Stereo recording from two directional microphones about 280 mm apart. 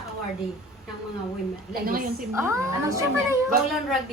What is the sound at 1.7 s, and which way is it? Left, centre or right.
Speech, right.